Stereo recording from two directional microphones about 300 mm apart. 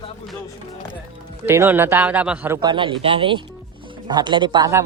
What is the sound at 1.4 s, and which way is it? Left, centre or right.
Speech, centre.